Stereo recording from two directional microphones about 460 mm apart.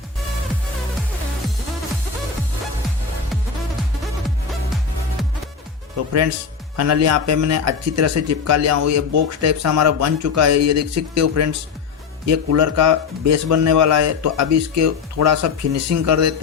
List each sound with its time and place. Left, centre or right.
6.7 s speech: right